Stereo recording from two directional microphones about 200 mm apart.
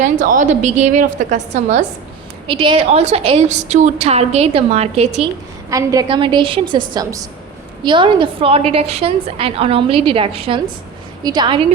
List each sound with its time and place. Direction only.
0.0 s a woman's voice: 40° right (ahead or behind)
2.5 s a woman's voice: 25° right (ahead or behind)
5.7 s a woman's voice: 20° right (ahead or behind)